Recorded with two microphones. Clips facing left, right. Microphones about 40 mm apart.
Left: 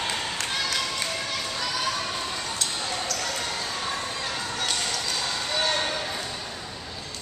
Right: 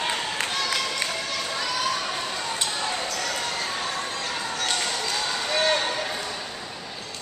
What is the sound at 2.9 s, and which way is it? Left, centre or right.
Basketball bounce, centre.